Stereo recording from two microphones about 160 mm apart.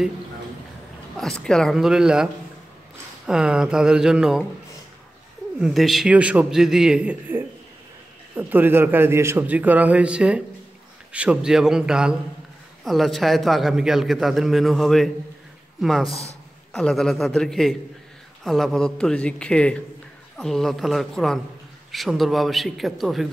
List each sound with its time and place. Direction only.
1.1 s a man's voice: 5° left (ahead or behind)
3.3 s a man's voice: 5° right (ahead or behind)
5.6 s a man's voice: centre (ahead or behind)
16.1 s speech: 40° left (ahead or behind)
16.7 s a man's voice: 5° left (ahead or behind)